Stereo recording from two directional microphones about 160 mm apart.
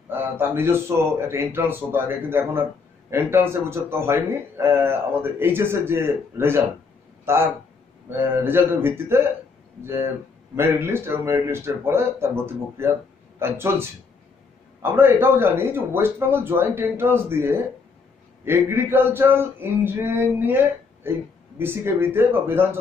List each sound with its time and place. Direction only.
0.1 s a man's voice: 15° right (ahead or behind)
10.5 s a man's voice: 15° right (ahead or behind)